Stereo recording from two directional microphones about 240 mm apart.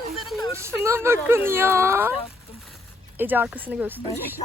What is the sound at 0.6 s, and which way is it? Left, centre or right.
Speech, centre.